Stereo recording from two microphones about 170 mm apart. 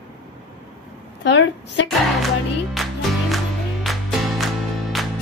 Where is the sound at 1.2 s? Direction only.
90° left.